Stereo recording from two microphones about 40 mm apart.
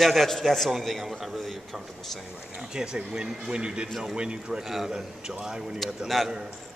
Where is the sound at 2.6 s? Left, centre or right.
Centre.